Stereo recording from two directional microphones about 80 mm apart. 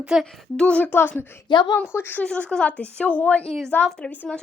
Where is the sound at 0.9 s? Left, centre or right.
Left.